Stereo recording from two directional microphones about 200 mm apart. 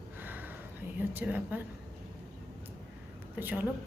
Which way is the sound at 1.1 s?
10° right (ahead or behind).